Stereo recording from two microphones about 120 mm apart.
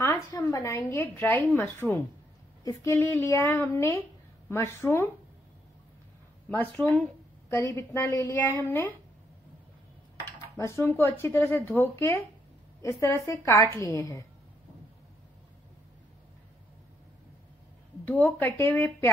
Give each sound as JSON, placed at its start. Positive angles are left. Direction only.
{"t": 0.0, "sound": "a woman's voice", "side_deg": 25}
{"t": 6.5, "sound": "speech", "side_deg": 10}
{"t": 7.4, "sound": "speech", "side_deg": 20}
{"t": 10.5, "sound": "speech", "side_deg": 25}
{"t": 18.4, "sound": "speech", "side_deg": 15}